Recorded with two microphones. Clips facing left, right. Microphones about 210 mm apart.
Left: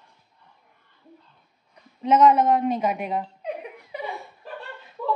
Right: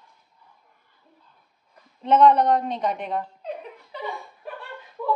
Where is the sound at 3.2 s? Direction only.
15° left (ahead or behind).